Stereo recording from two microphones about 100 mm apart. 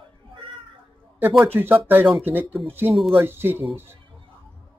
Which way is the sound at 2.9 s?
Centre (ahead or behind).